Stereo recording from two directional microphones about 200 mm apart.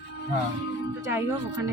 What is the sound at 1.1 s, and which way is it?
Speech, 10° right (ahead or behind).